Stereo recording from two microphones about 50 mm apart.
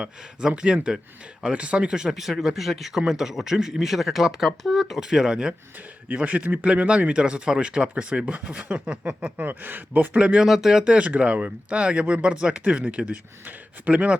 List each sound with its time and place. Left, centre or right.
0.0 s speech: centre
6.1 s speech: right
9.4 s speech: right
10.2 s speech: right
10.4 s speech: centre
10.9 s speech: right